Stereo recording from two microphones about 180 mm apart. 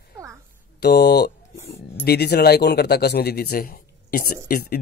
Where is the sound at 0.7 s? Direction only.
65° left (ahead or behind).